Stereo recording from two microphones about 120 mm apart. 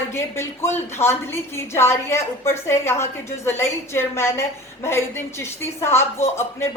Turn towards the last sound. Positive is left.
turn(degrees=20)  # may be behind; listen again after turning